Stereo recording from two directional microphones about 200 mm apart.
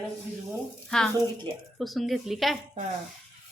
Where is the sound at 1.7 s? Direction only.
Centre (ahead or behind).